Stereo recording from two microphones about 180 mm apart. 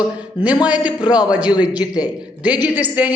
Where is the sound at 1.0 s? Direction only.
25° left (ahead or behind).